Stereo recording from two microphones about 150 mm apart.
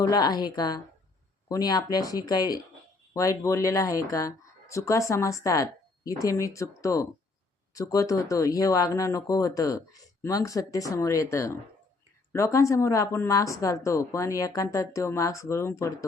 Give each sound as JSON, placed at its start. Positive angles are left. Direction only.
{"t": 0.0, "sound": "speech", "side_deg": 25}